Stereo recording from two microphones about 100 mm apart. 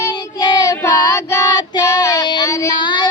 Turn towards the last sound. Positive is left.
turn(degrees=50)  # may be behind; listen again after turning